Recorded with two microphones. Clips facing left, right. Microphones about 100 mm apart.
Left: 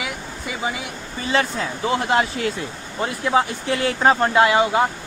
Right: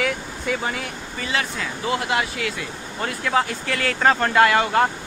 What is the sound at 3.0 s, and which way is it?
Speech, 20° left (ahead or behind).